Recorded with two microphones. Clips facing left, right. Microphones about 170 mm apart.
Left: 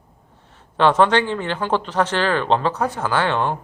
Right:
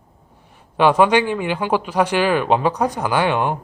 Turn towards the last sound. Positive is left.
turn(degrees=-15)  # may be behind; listen again after turning